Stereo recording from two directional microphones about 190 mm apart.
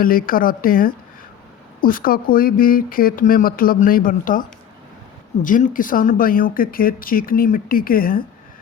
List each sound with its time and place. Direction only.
0.0 s speech: 50° left (ahead or behind)